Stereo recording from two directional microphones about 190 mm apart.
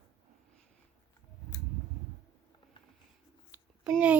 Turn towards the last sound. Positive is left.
turn(degrees=-5)  # may be behind; listen again after turning